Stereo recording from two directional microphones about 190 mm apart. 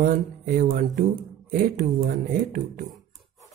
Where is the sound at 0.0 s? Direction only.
50° right (ahead or behind).